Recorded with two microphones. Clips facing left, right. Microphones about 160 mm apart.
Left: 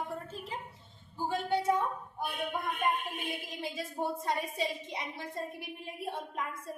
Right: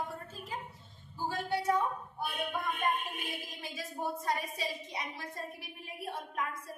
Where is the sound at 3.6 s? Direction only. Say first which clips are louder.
Left 3 dB; 25° left (ahead or behind).